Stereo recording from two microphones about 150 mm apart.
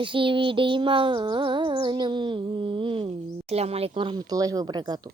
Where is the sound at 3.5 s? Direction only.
45° right (ahead or behind); by 5.0 s 25° right (ahead or behind).